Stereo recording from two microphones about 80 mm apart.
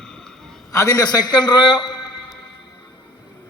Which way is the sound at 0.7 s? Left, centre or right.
Left.